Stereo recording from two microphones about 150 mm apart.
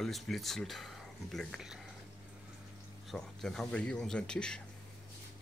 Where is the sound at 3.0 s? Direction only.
Centre (ahead or behind).